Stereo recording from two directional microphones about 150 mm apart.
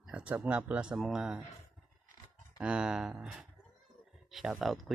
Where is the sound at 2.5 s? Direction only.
5° right (ahead or behind).